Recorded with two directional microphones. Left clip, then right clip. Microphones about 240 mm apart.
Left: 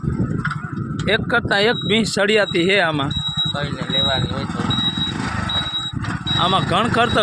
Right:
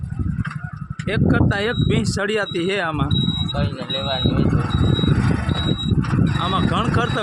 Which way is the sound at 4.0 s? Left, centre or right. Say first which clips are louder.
Left 6 dB; centre.